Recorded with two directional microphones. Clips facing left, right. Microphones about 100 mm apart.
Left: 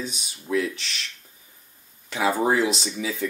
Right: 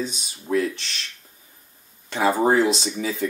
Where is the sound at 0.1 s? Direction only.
40° right (ahead or behind).